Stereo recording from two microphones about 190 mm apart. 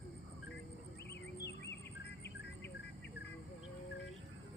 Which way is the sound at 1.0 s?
60° left (ahead or behind).